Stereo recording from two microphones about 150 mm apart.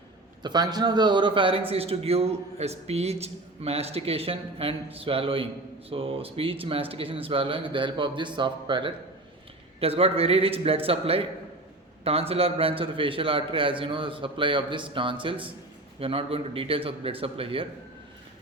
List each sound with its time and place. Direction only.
0.4 s a man's voice: 25° right (ahead or behind)